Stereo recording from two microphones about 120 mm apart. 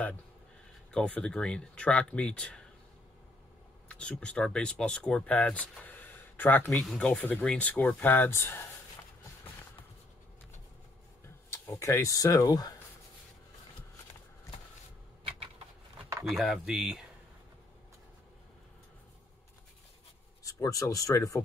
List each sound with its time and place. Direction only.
0.9 s speech: 10° left (ahead or behind)
3.9 s speech: 10° left (ahead or behind)
6.7 s speech: 5° left (ahead or behind)
11.5 s speech: 25° left (ahead or behind)
15.2 s a sound: 55° right (ahead or behind)
16.3 s speech: centre (ahead or behind)
20.4 s speech: 30° left (ahead or behind)